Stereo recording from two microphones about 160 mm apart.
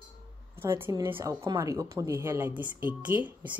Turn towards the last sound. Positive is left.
turn(degrees=-10)  # may be behind; listen again after turning